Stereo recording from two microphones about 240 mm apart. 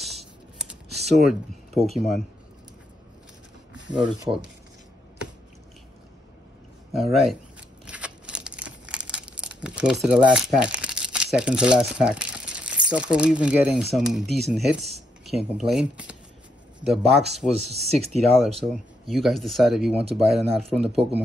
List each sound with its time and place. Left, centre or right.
0.0 s a sound: centre
1.2 s speech: centre
3.9 s speech: centre
6.9 s speech: centre
7.8 s crumpling: centre
10.0 s speech: centre
17.6 s speech: right
18.4 s speech: centre